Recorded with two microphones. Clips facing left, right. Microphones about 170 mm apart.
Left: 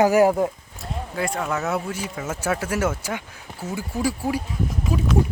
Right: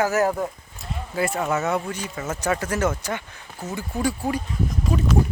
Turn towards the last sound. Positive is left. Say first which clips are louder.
# even
turn(degrees=5)  # may be behind; listen again after turning